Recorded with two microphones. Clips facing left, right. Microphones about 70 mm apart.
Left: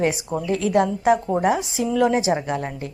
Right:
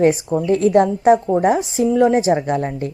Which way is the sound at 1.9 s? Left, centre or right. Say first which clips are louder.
Right 4 dB; right.